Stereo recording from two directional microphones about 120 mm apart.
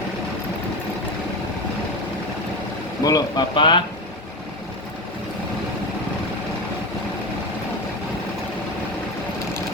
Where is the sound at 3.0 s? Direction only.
30° left (ahead or behind).